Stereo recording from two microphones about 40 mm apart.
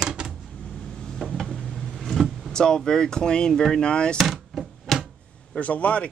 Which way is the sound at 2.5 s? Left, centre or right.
Centre.